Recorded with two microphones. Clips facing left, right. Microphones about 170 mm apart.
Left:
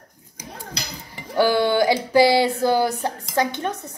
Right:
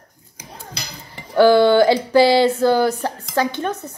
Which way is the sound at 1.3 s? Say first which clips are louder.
Right 6 dB; 10° left (ahead or behind).